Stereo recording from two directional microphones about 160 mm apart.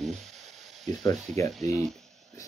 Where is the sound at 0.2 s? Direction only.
45° right (ahead or behind).